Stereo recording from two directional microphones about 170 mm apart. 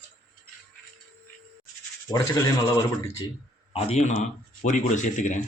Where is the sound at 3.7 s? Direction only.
35° left (ahead or behind).